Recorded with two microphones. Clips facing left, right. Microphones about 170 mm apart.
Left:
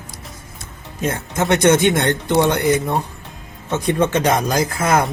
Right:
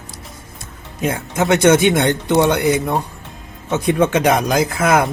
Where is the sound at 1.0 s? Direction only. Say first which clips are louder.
Right 2 dB; 15° right (ahead or behind).